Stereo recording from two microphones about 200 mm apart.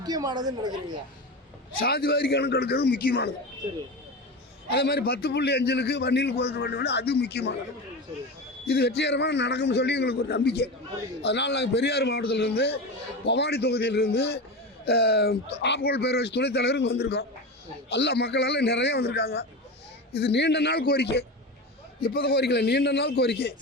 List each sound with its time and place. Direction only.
0.0 s a woman's voice: 20° right (ahead or behind)
1.8 s a man's voice: 50° left (ahead or behind)
4.7 s a man's voice: 50° left (ahead or behind)
8.6 s a man's voice: 50° left (ahead or behind)